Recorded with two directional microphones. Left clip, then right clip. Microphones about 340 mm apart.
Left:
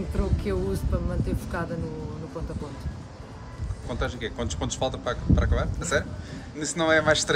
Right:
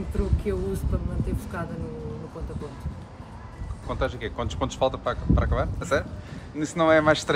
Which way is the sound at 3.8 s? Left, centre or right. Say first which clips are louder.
Right 2 dB; right.